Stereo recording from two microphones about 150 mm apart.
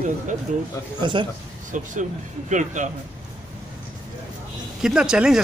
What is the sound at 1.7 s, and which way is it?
A man's voice, 55° right (ahead or behind).